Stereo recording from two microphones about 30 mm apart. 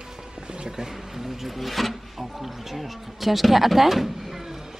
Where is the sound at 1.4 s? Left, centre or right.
Centre.